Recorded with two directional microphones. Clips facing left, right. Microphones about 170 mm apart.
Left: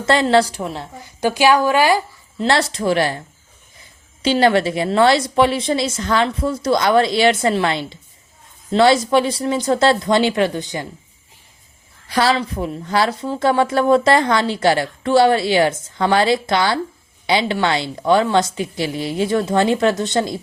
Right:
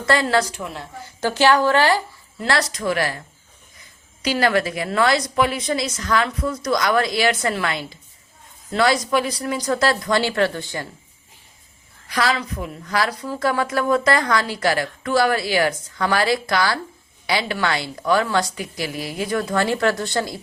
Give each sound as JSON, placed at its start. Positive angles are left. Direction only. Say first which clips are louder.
{"t": 0.0, "sound": "a woman's voice", "louder": "left 4 dB", "side_deg": 20}
{"t": 1.0, "sound": "a woman's voice", "louder": "left 2 dB", "side_deg": 15}
{"t": 2.4, "sound": "a woman's voice", "louder": "left 4 dB", "side_deg": 25}
{"t": 12.0, "sound": "a woman's voice", "louder": "left 5 dB", "side_deg": 30}